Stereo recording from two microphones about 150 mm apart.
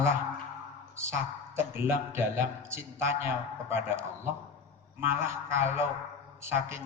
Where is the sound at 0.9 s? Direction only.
20° right (ahead or behind).